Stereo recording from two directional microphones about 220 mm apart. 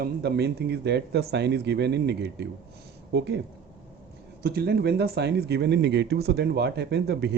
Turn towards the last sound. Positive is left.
turn(degrees=-50)  # may be behind; listen again after turning